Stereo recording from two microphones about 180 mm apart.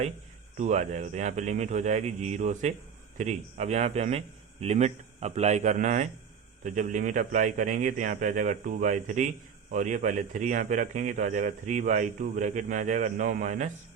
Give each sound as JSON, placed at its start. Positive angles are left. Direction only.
{"t": 0.5, "sound": "a man's voice", "side_deg": -40}